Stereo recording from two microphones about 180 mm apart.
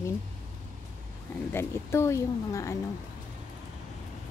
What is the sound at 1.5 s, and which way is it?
Speech, 15° left (ahead or behind).